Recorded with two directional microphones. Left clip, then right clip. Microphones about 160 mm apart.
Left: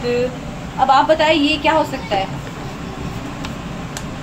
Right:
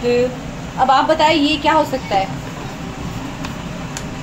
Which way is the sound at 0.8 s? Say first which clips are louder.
Even; 20° right (ahead or behind).